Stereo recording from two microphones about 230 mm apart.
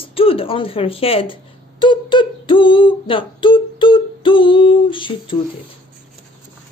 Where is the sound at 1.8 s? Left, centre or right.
Left.